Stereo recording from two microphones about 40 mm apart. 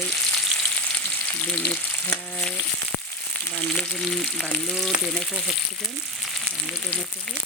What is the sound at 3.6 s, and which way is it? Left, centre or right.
Frying, left.